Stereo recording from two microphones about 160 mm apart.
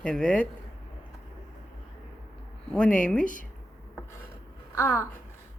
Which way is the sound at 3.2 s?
55° left (ahead or behind).